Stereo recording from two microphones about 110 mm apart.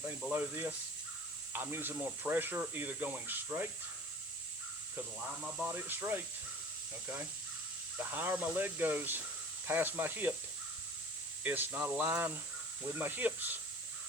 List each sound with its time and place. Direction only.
0.3 s speech: 20° right (ahead or behind)
5.4 s speech: 10° right (ahead or behind)
7.9 s speech: 15° right (ahead or behind)
11.4 s speech: 15° right (ahead or behind)